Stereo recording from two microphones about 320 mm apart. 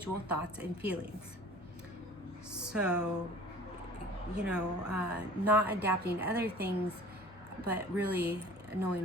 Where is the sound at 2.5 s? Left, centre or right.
Centre.